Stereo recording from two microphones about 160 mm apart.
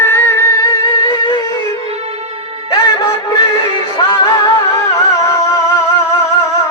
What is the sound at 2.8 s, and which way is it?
Music, 20° left (ahead or behind).